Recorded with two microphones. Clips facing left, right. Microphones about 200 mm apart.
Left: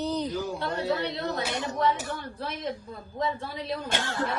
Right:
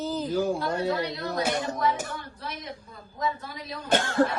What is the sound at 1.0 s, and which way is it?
Speech, 30° left (ahead or behind).